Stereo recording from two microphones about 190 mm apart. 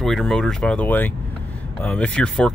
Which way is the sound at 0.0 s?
Centre (ahead or behind).